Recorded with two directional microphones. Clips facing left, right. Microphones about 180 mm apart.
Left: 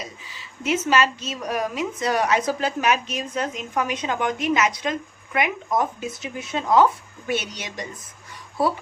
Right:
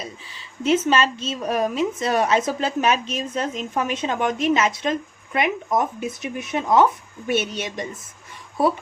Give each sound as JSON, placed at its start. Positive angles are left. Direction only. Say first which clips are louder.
{"t": 0.7, "sound": "a woman's voice", "louder": "right 2 dB", "side_deg": -30}